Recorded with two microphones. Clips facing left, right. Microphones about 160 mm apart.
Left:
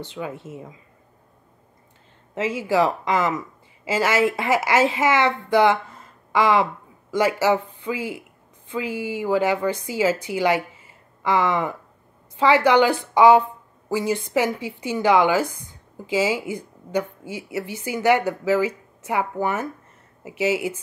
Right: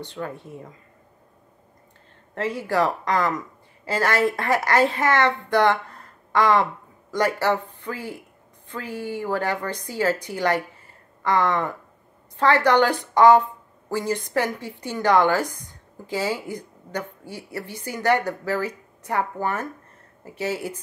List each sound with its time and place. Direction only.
0.2 s speech: 5° left (ahead or behind)
2.3 s speech: 5° left (ahead or behind)
7.4 s speech: 20° left (ahead or behind)
8.8 s speech: 90° left
9.2 s speech: 10° left (ahead or behind)